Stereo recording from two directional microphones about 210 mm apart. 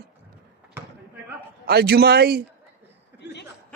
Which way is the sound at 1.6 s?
50° right (ahead or behind).